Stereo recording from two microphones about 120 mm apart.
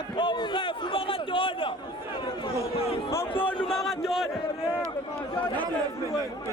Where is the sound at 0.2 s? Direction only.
45° left (ahead or behind).